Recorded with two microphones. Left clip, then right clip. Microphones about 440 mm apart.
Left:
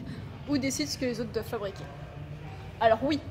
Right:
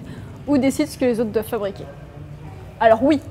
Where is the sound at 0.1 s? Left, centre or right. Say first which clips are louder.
Right 11 dB; right.